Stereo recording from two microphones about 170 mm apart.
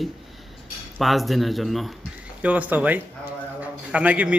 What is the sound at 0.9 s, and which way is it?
Speech, centre (ahead or behind).